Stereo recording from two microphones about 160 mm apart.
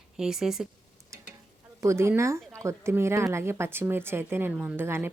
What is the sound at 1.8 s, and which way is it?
Speech, 15° right (ahead or behind).